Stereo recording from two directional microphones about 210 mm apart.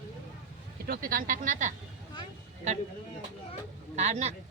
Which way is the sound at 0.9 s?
40° right (ahead or behind).